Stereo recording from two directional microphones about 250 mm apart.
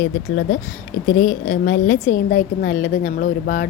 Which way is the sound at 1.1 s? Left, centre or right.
Left.